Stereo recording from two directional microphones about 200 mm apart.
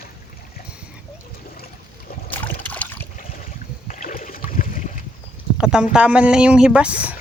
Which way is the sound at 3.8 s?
40° left (ahead or behind).